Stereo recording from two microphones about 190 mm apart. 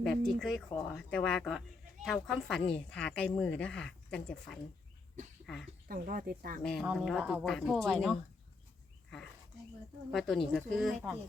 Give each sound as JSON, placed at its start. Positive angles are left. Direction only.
{"t": 0.0, "sound": "speech", "side_deg": 0}
{"t": 5.9, "sound": "speech", "side_deg": -50}
{"t": 6.6, "sound": "speech", "side_deg": 0}
{"t": 10.1, "sound": "speech", "side_deg": 0}